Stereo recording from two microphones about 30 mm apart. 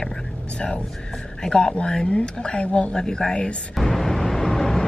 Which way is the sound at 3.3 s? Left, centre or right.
Left.